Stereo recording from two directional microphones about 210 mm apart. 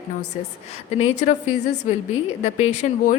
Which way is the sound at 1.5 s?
35° left (ahead or behind).